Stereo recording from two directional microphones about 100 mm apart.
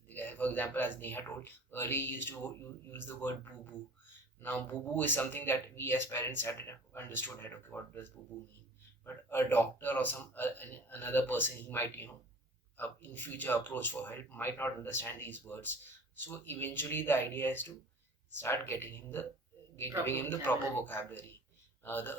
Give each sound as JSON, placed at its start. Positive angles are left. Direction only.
{"t": 0.1, "sound": "speech", "side_deg": 20}